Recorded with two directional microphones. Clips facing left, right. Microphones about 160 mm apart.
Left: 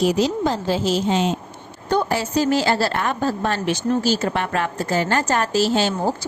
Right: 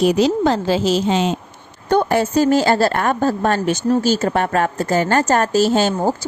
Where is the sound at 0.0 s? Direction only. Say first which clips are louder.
Right 4 dB; 65° right (ahead or behind); by 1.3 s 90° right.